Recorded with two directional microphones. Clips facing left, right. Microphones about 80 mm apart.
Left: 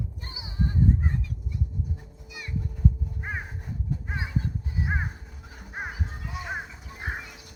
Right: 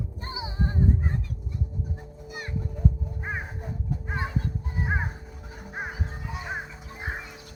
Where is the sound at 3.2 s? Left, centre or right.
Centre.